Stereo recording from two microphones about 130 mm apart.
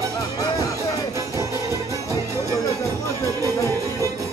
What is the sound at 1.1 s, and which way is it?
Music, 25° right (ahead or behind).